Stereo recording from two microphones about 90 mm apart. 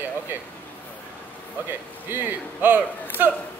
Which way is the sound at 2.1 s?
20° right (ahead or behind).